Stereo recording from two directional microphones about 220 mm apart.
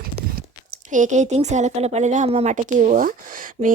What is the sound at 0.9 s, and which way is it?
A woman's voice, 35° right (ahead or behind).